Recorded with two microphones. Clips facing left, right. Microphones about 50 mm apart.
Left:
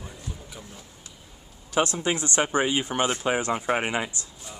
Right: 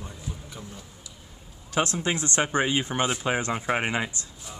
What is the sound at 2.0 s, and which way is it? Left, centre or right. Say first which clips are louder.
Speech: left 1 dB; left.